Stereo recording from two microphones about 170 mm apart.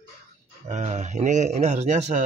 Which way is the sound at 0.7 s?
45° right (ahead or behind).